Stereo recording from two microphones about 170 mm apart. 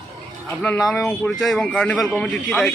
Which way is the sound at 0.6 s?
5° left (ahead or behind).